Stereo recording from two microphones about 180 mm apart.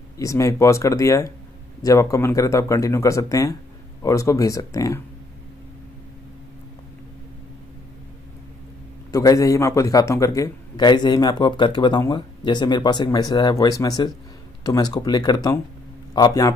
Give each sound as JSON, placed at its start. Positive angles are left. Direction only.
{"t": 0.2, "sound": "speech", "side_deg": 15}
{"t": 9.1, "sound": "a man's voice", "side_deg": 20}